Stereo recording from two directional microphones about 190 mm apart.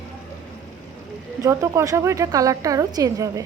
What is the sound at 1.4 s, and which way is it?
A woman's voice, 15° right (ahead or behind).